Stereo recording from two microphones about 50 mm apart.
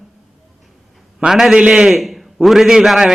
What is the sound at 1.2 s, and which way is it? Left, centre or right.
Speech, centre.